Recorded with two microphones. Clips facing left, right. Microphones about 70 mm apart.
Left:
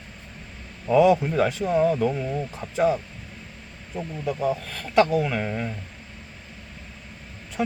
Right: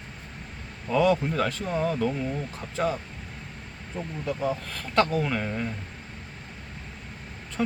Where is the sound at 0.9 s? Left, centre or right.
Centre.